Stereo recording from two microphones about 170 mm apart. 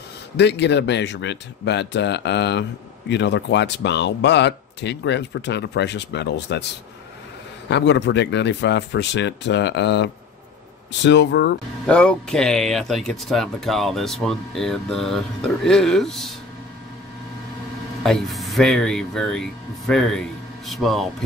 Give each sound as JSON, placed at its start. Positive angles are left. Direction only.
{"t": 0.4, "sound": "speech", "side_deg": 85}
{"t": 11.8, "sound": "speech", "side_deg": 5}
{"t": 18.0, "sound": "speech", "side_deg": 0}